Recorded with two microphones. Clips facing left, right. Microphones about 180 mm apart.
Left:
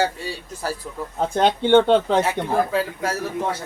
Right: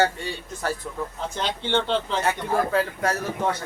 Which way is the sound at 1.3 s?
50° left (ahead or behind).